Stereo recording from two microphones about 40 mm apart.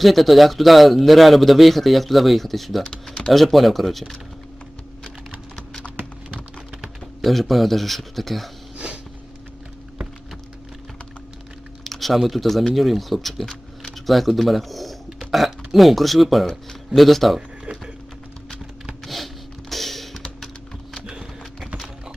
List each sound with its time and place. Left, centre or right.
0.0 s speech: centre
2.8 s typing: centre
3.3 s speech: centre
7.2 s speech: centre
11.8 s speech: centre
17.7 s a sound: right
19.0 s a sound: centre
19.7 s music: centre
21.1 s a sound: right